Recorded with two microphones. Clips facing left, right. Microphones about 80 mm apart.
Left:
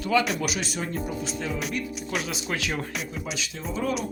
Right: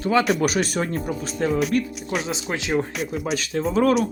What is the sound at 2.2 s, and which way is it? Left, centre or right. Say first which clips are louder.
Speech: right 3 dB; right.